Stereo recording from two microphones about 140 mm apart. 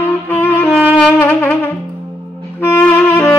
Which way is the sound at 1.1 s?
15° left (ahead or behind).